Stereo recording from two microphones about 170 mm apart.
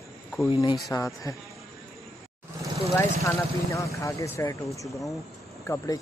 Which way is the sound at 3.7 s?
20° left (ahead or behind).